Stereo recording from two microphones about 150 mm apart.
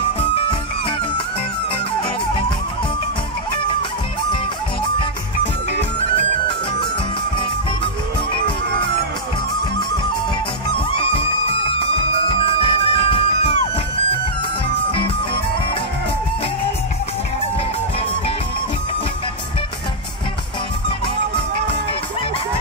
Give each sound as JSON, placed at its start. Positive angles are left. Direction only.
{"t": 0.2, "sound": "music", "side_deg": 40}
{"t": 10.9, "sound": "music", "side_deg": 40}